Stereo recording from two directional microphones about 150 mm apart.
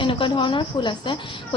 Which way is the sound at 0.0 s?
35° left (ahead or behind).